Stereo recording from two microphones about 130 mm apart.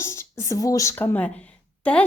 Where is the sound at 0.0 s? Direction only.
20° left (ahead or behind).